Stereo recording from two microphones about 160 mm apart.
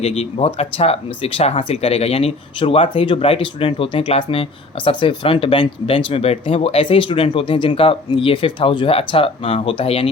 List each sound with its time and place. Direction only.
0.0 s speech: 40° left (ahead or behind)